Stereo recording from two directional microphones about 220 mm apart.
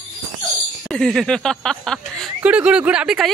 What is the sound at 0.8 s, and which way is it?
Speech, centre (ahead or behind).